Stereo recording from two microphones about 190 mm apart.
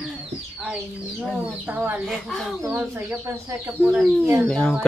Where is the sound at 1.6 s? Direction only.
10° right (ahead or behind).